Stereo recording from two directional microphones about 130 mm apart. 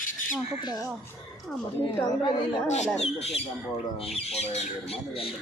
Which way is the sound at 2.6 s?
60° left (ahead or behind).